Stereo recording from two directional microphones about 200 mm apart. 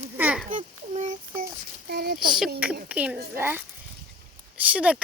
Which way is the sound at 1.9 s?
50° right (ahead or behind).